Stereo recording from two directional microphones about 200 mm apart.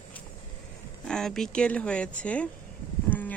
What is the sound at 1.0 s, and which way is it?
Speech, 5° left (ahead or behind).